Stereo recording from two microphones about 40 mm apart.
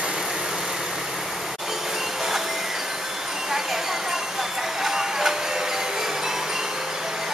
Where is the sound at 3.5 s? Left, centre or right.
Centre.